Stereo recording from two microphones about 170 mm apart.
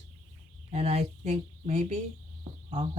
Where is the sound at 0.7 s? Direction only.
40° right (ahead or behind).